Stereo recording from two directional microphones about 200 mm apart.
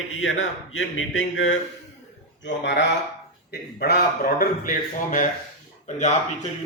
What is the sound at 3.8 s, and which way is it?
A man's voice, 50° left (ahead or behind).